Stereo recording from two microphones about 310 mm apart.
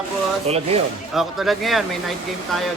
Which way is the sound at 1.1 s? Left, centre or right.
Centre.